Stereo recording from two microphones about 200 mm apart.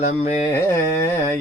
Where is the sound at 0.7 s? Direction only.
15° left (ahead or behind).